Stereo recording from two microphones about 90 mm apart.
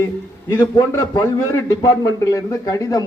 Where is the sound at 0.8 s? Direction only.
40° left (ahead or behind).